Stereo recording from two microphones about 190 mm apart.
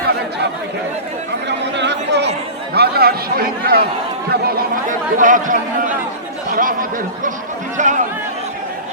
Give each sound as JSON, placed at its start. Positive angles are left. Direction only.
{"t": 1.5, "sound": "chatter", "side_deg": -65}
{"t": 4.3, "sound": "speech", "side_deg": -55}
{"t": 7.8, "sound": "speech", "side_deg": -40}